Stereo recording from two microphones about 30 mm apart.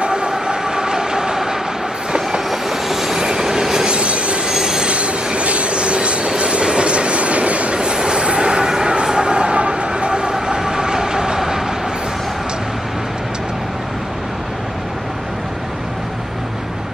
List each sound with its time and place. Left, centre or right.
0.0 s train: right
2.5 s train: centre
3.8 s train: right
4.5 s train wheels squealing: centre
4.8 s train: right
7.8 s train: right